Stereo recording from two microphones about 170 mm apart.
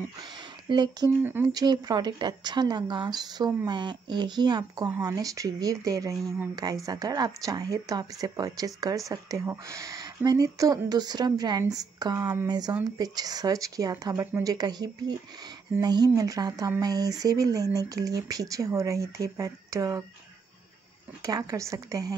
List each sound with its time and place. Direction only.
0.2 s speech: 25° right (ahead or behind)
21.2 s speech: 20° right (ahead or behind)